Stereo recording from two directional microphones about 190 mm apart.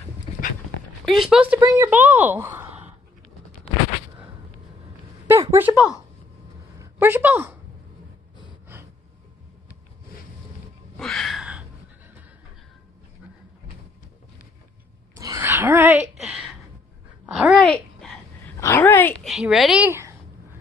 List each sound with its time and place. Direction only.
0.3 s dog: 35° left (ahead or behind)
1.0 s speech: centre (ahead or behind)
5.2 s speech: 15° right (ahead or behind)
5.8 s speech: 15° left (ahead or behind)
6.8 s a woman's voice: 10° right (ahead or behind)
11.0 s a sound: centre (ahead or behind)
15.1 s a sound: 15° right (ahead or behind); by 16.4 s centre (ahead or behind)
17.3 s a woman's voice: centre (ahead or behind)
18.6 s speech: 15° left (ahead or behind)
19.2 s a woman's voice: centre (ahead or behind)